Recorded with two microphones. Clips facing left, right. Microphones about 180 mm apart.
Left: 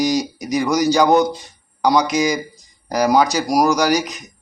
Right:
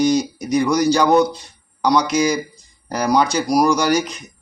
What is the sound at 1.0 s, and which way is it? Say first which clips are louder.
Speech: right 1 dB; 20° left (ahead or behind).